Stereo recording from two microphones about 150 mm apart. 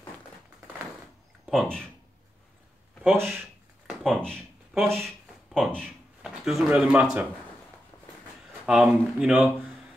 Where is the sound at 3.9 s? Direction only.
Centre (ahead or behind).